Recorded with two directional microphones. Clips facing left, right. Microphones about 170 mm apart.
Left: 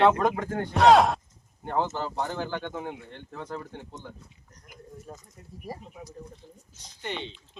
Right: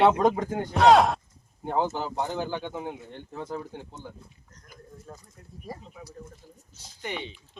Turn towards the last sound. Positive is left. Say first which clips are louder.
# even
turn(degrees=-10)  # may be behind; listen again after turning